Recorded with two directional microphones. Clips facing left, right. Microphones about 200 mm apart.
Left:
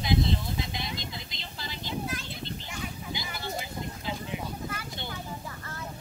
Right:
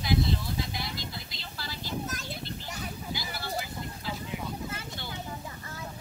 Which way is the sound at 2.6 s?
40° right (ahead or behind).